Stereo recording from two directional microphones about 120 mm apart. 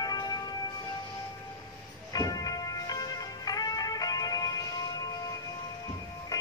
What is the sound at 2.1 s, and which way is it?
Music, 30° left (ahead or behind).